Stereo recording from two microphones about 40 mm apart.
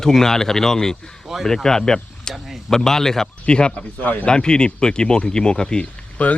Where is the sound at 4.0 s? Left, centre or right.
Left.